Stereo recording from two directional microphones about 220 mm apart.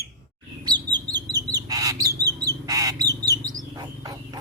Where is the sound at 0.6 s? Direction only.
20° right (ahead or behind).